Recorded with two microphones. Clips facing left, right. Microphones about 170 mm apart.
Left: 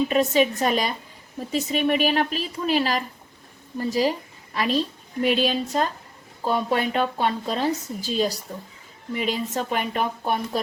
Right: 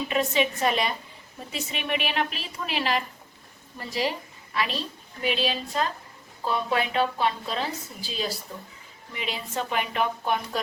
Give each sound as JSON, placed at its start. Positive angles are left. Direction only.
{"t": 0.1, "sound": "a woman's voice", "side_deg": 40}